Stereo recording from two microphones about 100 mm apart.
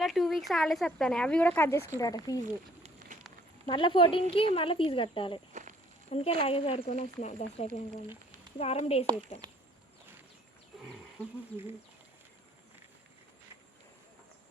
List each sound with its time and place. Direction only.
0.0 s speech: centre (ahead or behind)
1.5 s speech: 25° left (ahead or behind)
2.0 s speech: 35° left (ahead or behind)
3.7 s speech: 55° left (ahead or behind)
6.1 s speech: 90° left
9.4 s a sound: 45° right (ahead or behind)